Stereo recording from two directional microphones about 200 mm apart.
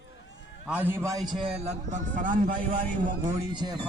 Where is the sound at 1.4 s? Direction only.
30° right (ahead or behind).